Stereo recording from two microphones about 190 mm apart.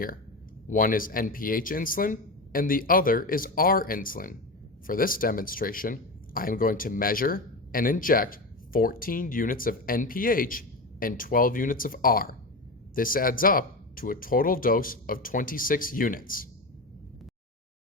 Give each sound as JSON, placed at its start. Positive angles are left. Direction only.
{"t": 0.7, "sound": "speech", "side_deg": 45}